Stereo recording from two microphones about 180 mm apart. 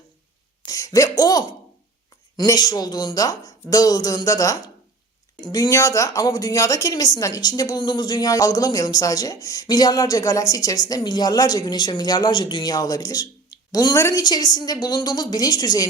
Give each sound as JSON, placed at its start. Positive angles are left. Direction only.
{"t": 0.6, "sound": "a woman's voice", "side_deg": 20}